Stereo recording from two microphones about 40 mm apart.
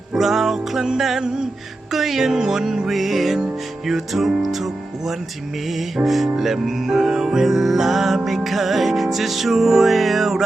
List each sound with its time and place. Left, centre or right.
0.1 s music: centre
1.9 s music: centre